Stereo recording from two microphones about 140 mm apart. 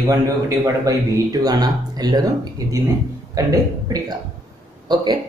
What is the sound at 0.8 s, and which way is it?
Speech, 25° right (ahead or behind).